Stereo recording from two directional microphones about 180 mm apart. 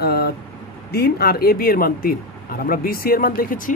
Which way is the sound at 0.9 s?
60° left (ahead or behind).